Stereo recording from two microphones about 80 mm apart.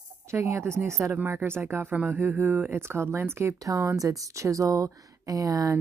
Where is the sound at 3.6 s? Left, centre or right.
Right.